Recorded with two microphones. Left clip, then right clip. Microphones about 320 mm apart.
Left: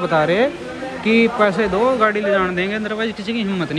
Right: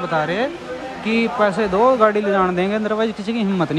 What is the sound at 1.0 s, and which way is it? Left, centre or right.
Speech, right.